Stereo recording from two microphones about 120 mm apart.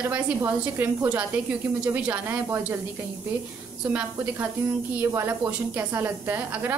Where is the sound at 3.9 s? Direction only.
20° right (ahead or behind).